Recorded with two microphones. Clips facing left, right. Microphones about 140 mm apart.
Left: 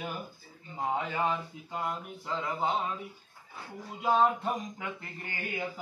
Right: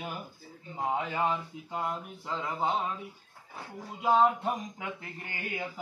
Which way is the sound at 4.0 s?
10° right (ahead or behind).